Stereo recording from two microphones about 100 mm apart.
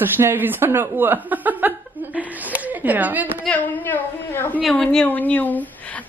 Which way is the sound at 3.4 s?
15° left (ahead or behind).